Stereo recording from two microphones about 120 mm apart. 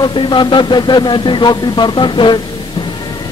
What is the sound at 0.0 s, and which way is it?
Speech, 40° left (ahead or behind).